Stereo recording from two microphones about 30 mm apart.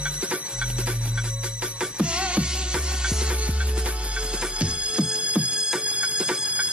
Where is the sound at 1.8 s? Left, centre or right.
Right.